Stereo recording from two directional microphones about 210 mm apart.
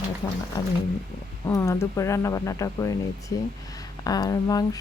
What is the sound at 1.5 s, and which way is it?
Speech, 15° left (ahead or behind).